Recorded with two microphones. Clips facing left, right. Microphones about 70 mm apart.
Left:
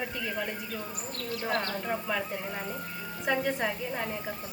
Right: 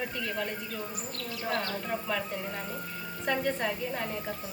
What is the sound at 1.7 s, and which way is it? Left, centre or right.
A woman's voice, centre.